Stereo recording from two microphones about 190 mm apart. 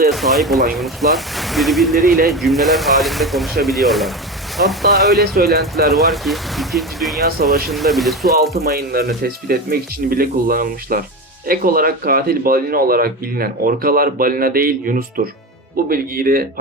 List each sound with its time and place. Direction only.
0.1 s speech: centre (ahead or behind)
2.0 s speech: 50° right (ahead or behind)
2.3 s speech: centre (ahead or behind)
5.2 s speech: 55° right (ahead or behind)
5.9 s speech: centre (ahead or behind)
8.7 s speech: 55° right (ahead or behind)